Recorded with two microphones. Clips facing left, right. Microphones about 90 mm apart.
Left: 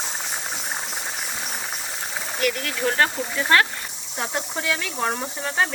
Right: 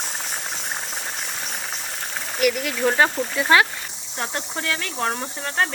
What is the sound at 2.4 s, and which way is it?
Speech, 5° right (ahead or behind).